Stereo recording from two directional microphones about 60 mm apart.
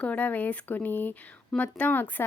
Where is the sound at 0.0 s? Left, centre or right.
Left.